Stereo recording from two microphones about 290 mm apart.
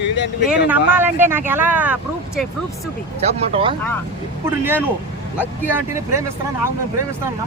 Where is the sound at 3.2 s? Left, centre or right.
Centre.